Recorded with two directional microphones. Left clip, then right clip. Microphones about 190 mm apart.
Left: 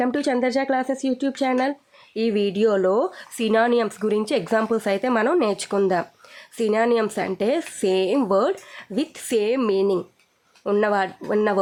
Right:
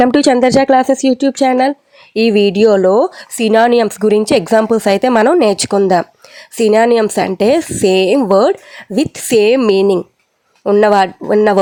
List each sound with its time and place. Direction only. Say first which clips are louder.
0.0 s speech: right 12 dB; 40° right (ahead or behind)